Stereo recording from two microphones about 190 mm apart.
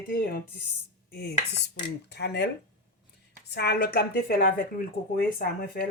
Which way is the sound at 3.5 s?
60° left (ahead or behind).